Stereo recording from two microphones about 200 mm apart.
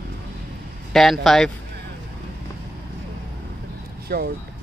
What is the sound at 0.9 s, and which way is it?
Speech, centre (ahead or behind).